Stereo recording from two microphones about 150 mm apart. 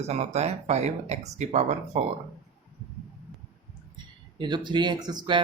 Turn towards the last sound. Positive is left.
turn(degrees=-30)  # may be behind; listen again after turning